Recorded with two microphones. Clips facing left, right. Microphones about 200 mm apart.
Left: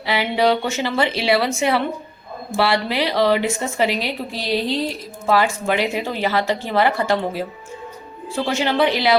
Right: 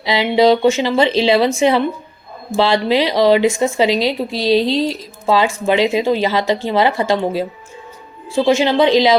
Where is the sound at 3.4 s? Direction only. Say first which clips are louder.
Right 8 dB; 90° right.